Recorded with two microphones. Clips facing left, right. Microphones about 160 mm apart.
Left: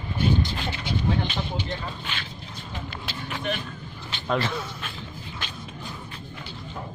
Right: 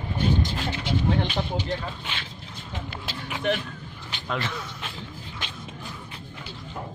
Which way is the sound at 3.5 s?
70° right (ahead or behind).